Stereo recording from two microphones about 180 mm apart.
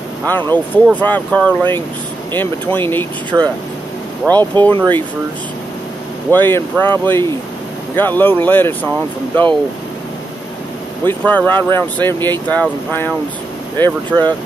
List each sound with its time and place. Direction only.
0.3 s speech: 10° left (ahead or behind)
4.3 s speech: 25° right (ahead or behind)
6.3 s speech: 10° left (ahead or behind)
11.1 s speech: 10° left (ahead or behind)